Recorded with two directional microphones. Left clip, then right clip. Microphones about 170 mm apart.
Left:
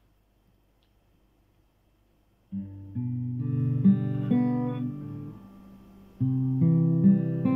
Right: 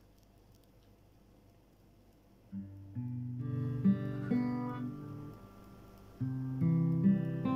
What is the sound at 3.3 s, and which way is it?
Guitar, 25° left (ahead or behind).